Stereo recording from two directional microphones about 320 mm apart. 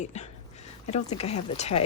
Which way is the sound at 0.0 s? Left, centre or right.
Left.